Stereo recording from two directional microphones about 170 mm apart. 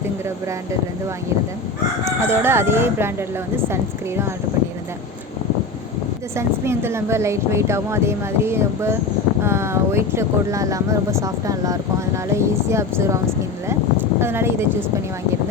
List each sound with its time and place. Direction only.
2.0 s speech: 15° right (ahead or behind)
6.3 s speech: 15° right (ahead or behind)
14.2 s speech: 15° right (ahead or behind)